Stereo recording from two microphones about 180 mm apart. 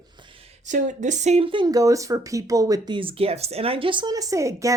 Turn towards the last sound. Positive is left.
turn(degrees=-15)  # may be behind; listen again after turning